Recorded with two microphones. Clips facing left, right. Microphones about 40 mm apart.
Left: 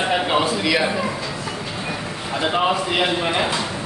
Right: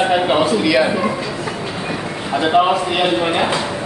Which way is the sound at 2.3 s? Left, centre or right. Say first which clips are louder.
Right 6 dB; centre.